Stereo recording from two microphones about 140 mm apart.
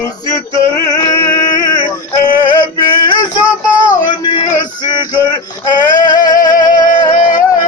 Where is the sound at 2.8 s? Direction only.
35° left (ahead or behind).